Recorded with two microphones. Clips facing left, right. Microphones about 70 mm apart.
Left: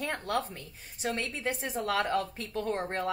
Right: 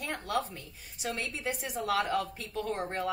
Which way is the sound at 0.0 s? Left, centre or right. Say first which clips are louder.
Left 1 dB; left.